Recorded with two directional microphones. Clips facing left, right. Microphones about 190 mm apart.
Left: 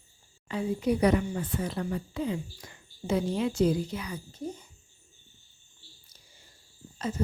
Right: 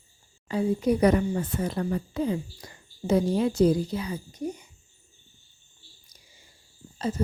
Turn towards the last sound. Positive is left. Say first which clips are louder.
# right 3 dB
turn(degrees=-35)  # may be behind; listen again after turning